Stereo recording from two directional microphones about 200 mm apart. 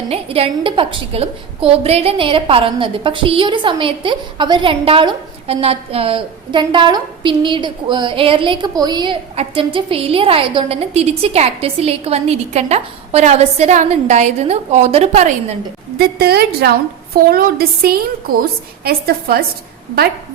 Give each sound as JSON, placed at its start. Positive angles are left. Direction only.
{"t": 0.1, "sound": "a woman's voice", "side_deg": -30}
{"t": 16.0, "sound": "a woman's voice", "side_deg": -50}